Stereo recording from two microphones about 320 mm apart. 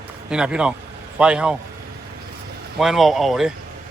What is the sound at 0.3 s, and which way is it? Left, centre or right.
Speech, centre.